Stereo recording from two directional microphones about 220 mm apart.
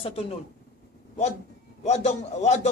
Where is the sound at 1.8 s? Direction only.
30° left (ahead or behind).